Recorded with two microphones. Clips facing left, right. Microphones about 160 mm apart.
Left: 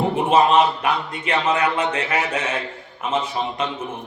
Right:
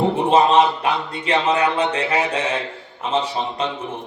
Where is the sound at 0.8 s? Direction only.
30° right (ahead or behind).